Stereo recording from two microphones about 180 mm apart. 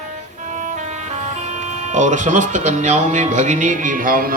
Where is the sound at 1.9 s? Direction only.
40° right (ahead or behind).